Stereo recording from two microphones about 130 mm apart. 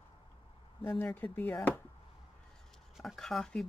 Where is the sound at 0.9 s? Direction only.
10° left (ahead or behind).